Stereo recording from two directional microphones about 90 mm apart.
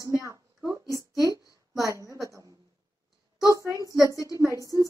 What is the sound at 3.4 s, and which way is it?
Speech, 40° right (ahead or behind).